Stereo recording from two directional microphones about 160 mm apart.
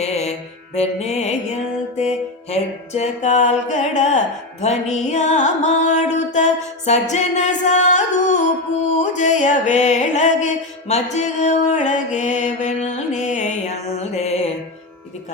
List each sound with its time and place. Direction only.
0.0 s mantra: 40° left (ahead or behind)
0.8 s music: 40° left (ahead or behind)